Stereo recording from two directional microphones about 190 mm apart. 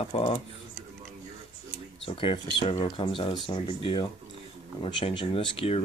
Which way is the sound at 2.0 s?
25° left (ahead or behind).